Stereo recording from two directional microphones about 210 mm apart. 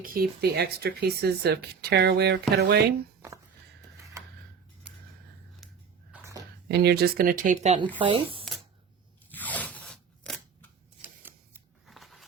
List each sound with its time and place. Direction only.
0.0 s speech: 45° right (ahead or behind)
5.6 s biting: centre (ahead or behind)
6.1 s a sound: 10° right (ahead or behind)
6.7 s speech: 50° right (ahead or behind); by 8.4 s 25° right (ahead or behind)
9.3 s crunch: 5° left (ahead or behind)
11.2 s scissors: 10° right (ahead or behind)